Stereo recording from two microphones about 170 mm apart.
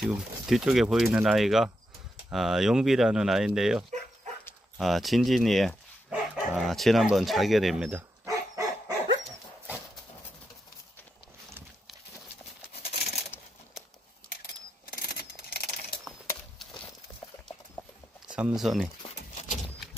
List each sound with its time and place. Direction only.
0.0 s speech: 5° right (ahead or behind)
8.3 s dog: 20° right (ahead or behind)
12.7 s a sound: 35° left (ahead or behind)
15.0 s a sound: 65° left (ahead or behind)
18.3 s speech: 5° right (ahead or behind)
19.3 s horse: 45° left (ahead or behind)